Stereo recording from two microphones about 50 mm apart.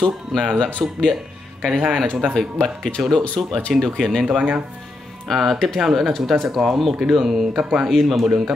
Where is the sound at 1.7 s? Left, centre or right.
Centre.